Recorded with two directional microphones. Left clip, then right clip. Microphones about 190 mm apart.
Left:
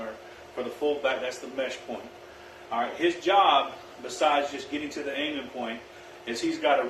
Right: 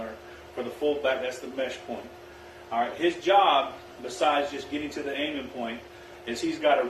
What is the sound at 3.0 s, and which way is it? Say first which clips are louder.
A man's voice: even; 15° left (ahead or behind).